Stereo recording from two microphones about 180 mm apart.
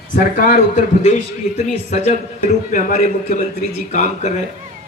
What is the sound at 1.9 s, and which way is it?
Speech, 35° left (ahead or behind).